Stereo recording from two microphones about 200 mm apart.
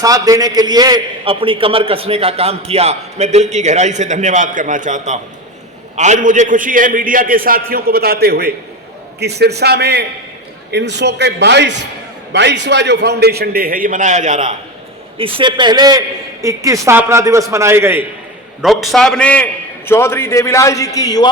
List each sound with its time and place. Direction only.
0.0 s a man's voice: 15° right (ahead or behind); by 14.5 s 35° right (ahead or behind)
15.2 s a man's voice: 25° right (ahead or behind)
18.6 s a man's voice: centre (ahead or behind); by 21.2 s 20° left (ahead or behind)